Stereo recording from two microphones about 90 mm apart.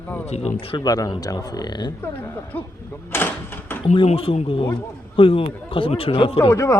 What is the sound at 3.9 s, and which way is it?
Speech, 90° left.